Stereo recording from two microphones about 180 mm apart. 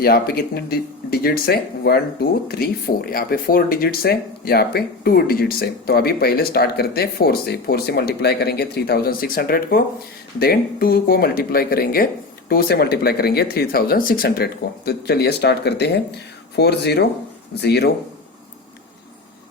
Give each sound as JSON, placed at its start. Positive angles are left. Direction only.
{"t": 0.0, "sound": "speech", "side_deg": 60}